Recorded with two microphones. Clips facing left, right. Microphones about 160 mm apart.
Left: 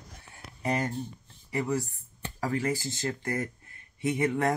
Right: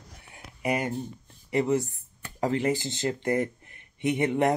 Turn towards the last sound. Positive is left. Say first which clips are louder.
# right 3 dB
turn(degrees=-20)  # may be behind; listen again after turning